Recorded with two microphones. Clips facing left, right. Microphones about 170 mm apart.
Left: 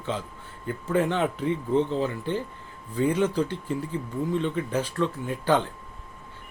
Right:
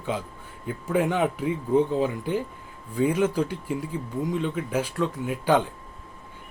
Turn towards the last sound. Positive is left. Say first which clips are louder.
# right 1 dB
turn(degrees=-10)  # may be behind; listen again after turning